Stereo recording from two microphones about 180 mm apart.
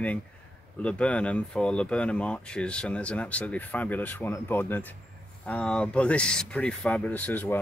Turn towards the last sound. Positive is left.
turn(degrees=10)  # may be behind; listen again after turning